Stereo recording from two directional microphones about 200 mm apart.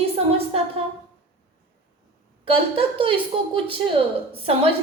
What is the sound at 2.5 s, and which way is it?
Speech, 25° right (ahead or behind).